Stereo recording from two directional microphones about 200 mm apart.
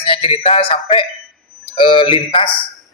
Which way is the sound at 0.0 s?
25° left (ahead or behind).